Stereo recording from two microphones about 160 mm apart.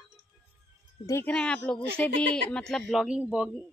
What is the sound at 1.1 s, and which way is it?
Speech, 15° left (ahead or behind).